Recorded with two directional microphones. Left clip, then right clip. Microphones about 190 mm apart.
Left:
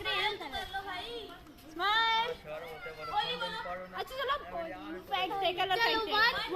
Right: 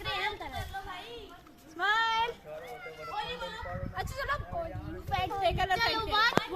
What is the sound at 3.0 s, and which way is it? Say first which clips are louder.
Speech: left 4 dB; 55° left (ahead or behind).